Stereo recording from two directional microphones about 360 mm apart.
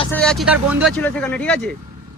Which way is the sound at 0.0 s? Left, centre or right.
Centre.